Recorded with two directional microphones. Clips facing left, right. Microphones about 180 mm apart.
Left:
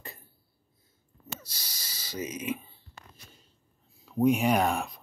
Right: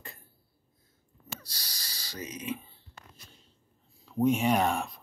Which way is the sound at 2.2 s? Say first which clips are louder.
Left 2 dB; 5° left (ahead or behind).